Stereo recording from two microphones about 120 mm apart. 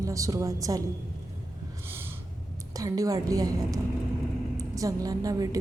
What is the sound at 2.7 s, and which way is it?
A woman's voice, 30° right (ahead or behind).